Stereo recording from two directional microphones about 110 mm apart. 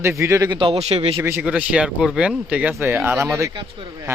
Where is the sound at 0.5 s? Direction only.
50° right (ahead or behind).